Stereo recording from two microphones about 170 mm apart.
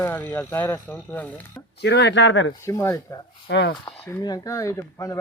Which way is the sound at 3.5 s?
90° left.